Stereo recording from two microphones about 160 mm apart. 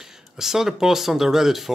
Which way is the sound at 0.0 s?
5° right (ahead or behind).